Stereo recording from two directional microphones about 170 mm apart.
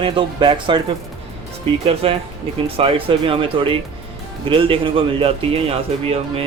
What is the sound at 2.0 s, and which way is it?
Speech, 35° right (ahead or behind).